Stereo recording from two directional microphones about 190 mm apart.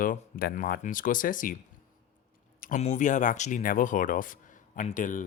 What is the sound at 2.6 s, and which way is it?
Speech, 40° left (ahead or behind).